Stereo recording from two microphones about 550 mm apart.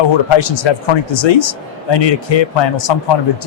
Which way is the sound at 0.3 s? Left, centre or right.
Left.